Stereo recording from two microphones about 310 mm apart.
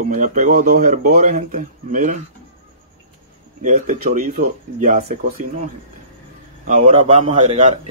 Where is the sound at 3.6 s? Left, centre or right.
Right.